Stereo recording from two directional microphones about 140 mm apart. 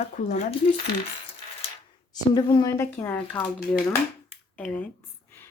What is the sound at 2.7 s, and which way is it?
Speech, 15° left (ahead or behind).